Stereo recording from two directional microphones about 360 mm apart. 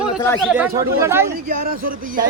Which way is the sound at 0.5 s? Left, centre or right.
Centre.